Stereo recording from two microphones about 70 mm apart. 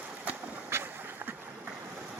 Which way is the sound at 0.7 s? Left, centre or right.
Right.